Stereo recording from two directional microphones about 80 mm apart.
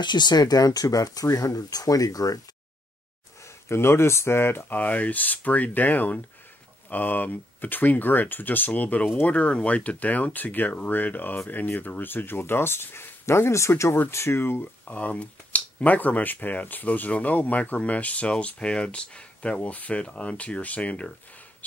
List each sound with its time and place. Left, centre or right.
0.0 s speech: left
3.4 s speech: left; by 21.1 s centre